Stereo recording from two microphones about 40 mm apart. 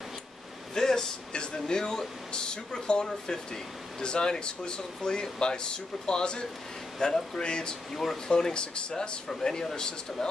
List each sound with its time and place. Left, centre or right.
0.7 s speech: centre
7.9 s speech: centre
8.3 s speech: centre